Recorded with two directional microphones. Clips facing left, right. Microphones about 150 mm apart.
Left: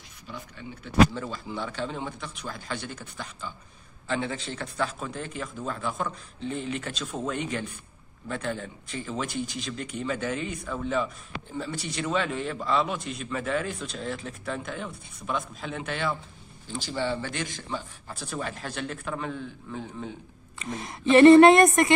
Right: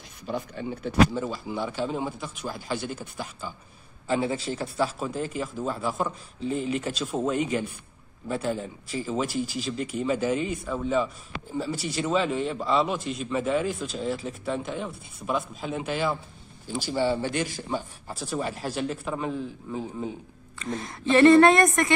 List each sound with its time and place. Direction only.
0.3 s speech: 40° right (ahead or behind)
1.1 s a man's voice: 10° right (ahead or behind)
20.5 s speech: 15° left (ahead or behind)